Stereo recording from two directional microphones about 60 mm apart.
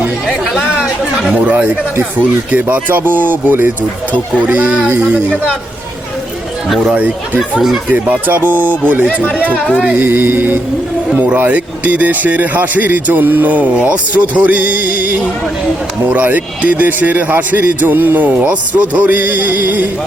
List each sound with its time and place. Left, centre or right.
1.3 s speech: right
6.8 s speech: right
9.7 s speech: centre
10.0 s speech: right